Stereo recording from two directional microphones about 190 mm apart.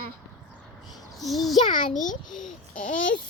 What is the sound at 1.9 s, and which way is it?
Speech, 40° left (ahead or behind).